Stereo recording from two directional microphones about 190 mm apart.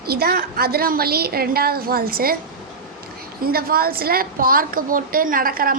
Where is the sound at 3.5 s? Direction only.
50° right (ahead or behind).